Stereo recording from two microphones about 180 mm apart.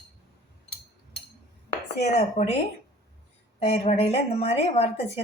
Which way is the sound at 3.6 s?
35° left (ahead or behind).